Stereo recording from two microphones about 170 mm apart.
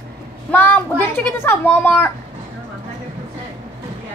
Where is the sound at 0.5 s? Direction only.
10° left (ahead or behind).